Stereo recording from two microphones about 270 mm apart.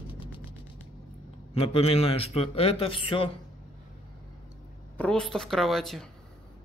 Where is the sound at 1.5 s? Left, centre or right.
Left.